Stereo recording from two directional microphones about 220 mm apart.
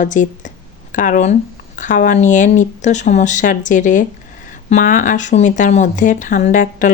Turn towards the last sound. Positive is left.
turn(degrees=35)  # may be behind; listen again after turning